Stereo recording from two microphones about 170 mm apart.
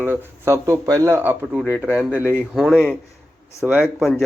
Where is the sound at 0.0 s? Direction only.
10° right (ahead or behind).